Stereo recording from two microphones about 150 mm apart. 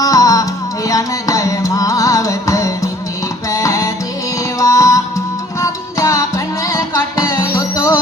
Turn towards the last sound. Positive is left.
turn(degrees=20)  # may be behind; listen again after turning